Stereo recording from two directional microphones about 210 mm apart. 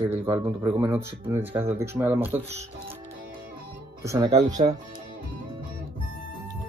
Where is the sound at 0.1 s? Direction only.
15° right (ahead or behind).